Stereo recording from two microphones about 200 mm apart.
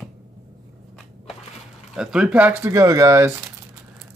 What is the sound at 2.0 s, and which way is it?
Speech, 5° right (ahead or behind).